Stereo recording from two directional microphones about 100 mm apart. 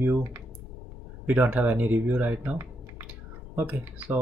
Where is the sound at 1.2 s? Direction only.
15° right (ahead or behind).